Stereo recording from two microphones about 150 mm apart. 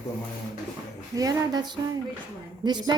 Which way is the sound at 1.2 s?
25° right (ahead or behind).